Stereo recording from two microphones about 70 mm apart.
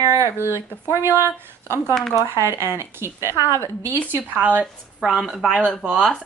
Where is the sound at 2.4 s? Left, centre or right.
Right.